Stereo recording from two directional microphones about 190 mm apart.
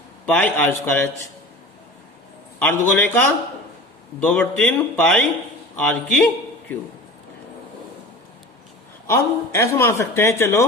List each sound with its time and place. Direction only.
0.3 s speech: 10° left (ahead or behind)
2.6 s a man's voice: 10° left (ahead or behind)
9.0 s speech: 15° left (ahead or behind)